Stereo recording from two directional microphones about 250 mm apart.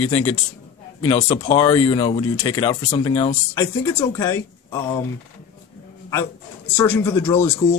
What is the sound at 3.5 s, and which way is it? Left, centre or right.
Speech, centre.